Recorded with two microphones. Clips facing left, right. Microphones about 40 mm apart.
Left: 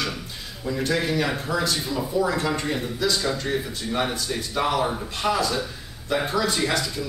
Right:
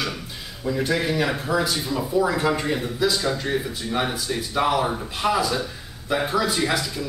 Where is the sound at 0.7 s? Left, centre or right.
Centre.